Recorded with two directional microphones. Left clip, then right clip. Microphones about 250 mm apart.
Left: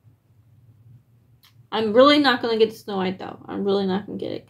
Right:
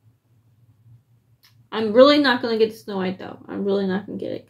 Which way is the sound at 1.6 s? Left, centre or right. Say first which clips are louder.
Right 1 dB; centre.